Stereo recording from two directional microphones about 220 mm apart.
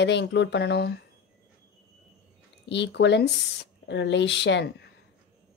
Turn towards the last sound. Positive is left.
turn(degrees=50)  # may be behind; listen again after turning